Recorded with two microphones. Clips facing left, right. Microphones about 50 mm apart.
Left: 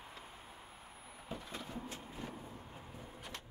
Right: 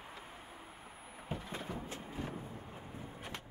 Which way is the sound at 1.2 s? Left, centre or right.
Right.